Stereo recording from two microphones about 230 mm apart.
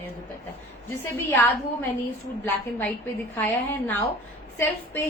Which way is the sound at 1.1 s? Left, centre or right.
Centre.